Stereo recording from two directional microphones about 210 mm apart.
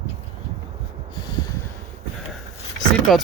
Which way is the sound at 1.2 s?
20° left (ahead or behind).